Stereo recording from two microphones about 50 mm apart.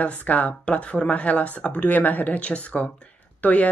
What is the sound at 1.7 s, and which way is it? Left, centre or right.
Speech, left.